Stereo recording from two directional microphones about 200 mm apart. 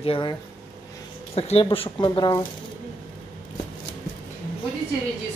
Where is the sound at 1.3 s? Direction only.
30° left (ahead or behind).